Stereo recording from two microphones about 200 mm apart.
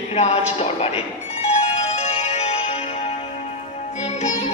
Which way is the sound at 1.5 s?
30° left (ahead or behind).